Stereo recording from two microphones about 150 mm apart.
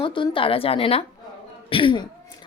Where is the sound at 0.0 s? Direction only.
35° left (ahead or behind).